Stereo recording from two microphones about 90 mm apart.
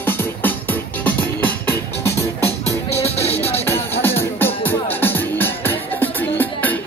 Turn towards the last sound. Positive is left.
turn(degrees=20)  # may be behind; listen again after turning